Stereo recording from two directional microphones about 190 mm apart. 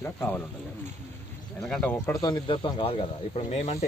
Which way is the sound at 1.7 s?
5° left (ahead or behind).